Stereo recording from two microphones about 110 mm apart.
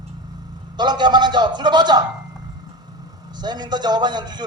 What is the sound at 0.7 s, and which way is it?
A man's voice, 40° right (ahead or behind).